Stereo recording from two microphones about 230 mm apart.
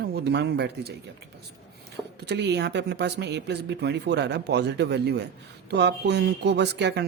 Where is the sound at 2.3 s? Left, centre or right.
Right.